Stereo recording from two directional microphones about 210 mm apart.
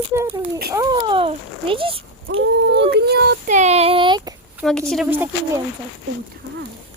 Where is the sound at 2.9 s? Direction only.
50° right (ahead or behind).